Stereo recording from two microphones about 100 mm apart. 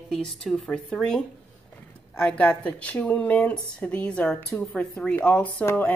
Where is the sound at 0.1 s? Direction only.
5° left (ahead or behind).